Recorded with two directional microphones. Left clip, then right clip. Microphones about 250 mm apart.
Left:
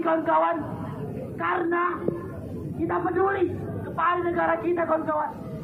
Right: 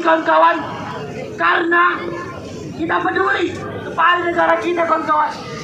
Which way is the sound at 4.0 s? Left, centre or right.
Right.